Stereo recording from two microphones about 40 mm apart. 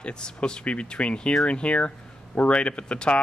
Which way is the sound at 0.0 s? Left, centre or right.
Left.